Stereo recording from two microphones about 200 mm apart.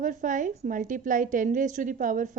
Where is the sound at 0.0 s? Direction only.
40° right (ahead or behind).